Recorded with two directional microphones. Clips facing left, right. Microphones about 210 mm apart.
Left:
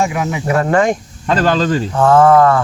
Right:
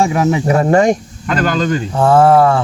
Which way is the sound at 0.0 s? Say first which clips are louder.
Right 4 dB; 35° right (ahead or behind).